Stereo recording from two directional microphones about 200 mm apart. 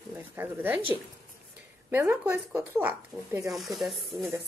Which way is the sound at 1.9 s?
10° right (ahead or behind).